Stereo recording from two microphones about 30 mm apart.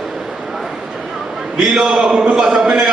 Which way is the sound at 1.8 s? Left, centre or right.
Right.